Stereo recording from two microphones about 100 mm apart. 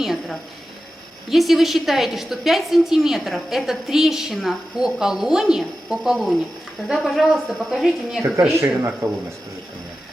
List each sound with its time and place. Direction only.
0.0 s a woman's voice: 5° right (ahead or behind)
8.5 s a man's voice: 25° right (ahead or behind)